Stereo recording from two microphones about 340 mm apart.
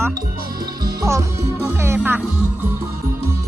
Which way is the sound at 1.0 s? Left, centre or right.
Centre.